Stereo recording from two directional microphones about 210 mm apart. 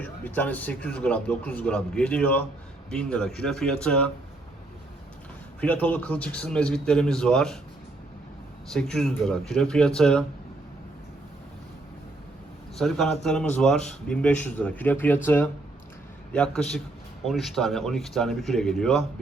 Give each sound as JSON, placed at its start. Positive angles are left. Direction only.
{"t": 0.0, "sound": "a man's voice", "side_deg": 10}
{"t": 5.5, "sound": "speech", "side_deg": 10}
{"t": 8.7, "sound": "speech", "side_deg": 5}
{"t": 12.8, "sound": "a man's voice", "side_deg": 0}